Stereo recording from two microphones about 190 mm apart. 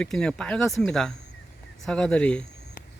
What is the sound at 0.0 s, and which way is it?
Speech, 5° left (ahead or behind).